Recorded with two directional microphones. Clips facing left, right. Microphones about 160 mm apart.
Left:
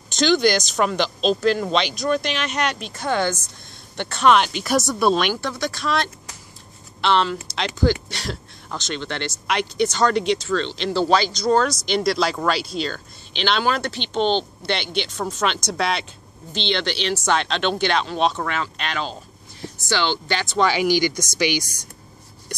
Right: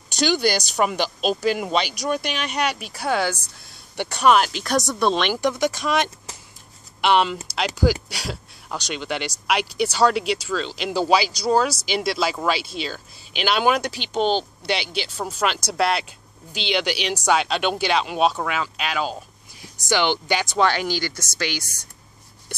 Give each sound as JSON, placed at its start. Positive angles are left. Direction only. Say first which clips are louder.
{"t": 0.1, "sound": "speech", "louder": "left 3 dB", "side_deg": -10}
{"t": 5.3, "sound": "speech", "louder": "right 4 dB", "side_deg": -15}
{"t": 20.6, "sound": "speech", "louder": "left 7 dB", "side_deg": 10}